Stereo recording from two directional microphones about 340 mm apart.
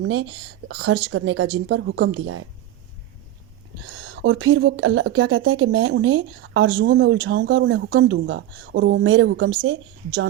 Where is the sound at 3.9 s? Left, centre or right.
Right.